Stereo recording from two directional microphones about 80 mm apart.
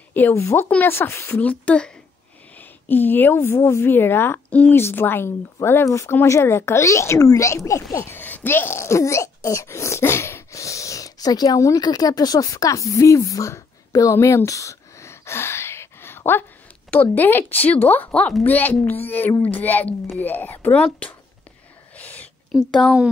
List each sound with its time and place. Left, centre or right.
0.3 s a child's voice: left
0.7 s a woman's voice: left
1.4 s a woman's voice: centre; by 8.1 s left
8.1 s speech: left
14.2 s a sound: left
16.9 s a woman's voice: left
21.9 s a sound: left
22.5 s speech: centre